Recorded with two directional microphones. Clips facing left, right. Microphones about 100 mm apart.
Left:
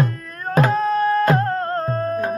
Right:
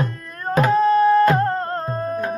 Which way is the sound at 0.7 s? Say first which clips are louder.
Right 4 dB; centre (ahead or behind).